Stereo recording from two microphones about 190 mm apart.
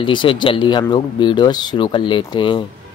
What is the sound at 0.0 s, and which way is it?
Speech, 25° left (ahead or behind).